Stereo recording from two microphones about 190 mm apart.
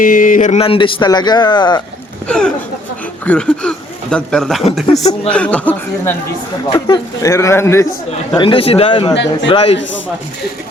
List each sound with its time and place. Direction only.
0.0 s a man's voice: 45° left (ahead or behind); by 1.8 s 20° left (ahead or behind)
2.2 s speech: 5° left (ahead or behind)
6.7 s speech: 20° left (ahead or behind)
8.4 s a man's voice: 25° left (ahead or behind)
9.1 s a man's voice: 70° left (ahead or behind)
9.5 s a man's voice: 30° left (ahead or behind)